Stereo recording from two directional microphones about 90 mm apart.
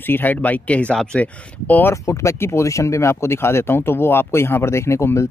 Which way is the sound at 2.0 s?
30° left (ahead or behind).